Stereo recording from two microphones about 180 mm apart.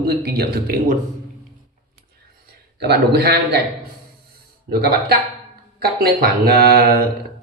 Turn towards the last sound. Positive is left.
turn(degrees=-55)  # may be behind; listen again after turning